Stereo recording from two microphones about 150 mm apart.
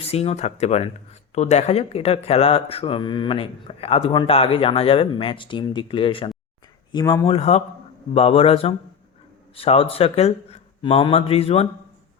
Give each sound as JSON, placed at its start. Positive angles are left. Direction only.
{"t": 0.0, "sound": "speech", "side_deg": 40}
{"t": 7.3, "sound": "speech", "side_deg": 45}